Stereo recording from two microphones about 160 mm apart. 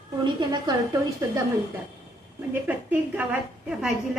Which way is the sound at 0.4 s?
30° right (ahead or behind).